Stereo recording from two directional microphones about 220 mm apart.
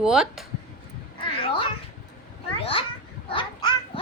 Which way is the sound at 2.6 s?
25° left (ahead or behind).